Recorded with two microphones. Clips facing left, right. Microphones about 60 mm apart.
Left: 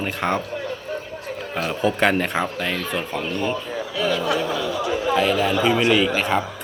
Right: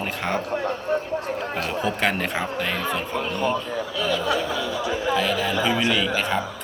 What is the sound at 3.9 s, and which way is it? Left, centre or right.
Speech, centre.